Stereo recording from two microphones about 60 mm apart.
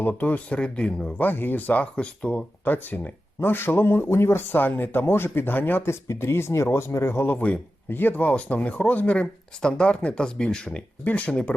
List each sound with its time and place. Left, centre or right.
0.0 s speech: left
1.2 s speech: left
2.6 s speech: left
5.8 s speech: left
7.3 s speech: left